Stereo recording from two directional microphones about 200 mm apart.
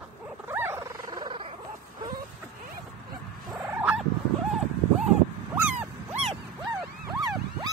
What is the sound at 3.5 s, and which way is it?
Fowl, 5° right (ahead or behind).